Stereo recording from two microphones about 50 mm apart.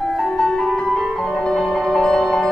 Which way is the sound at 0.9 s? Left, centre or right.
Centre.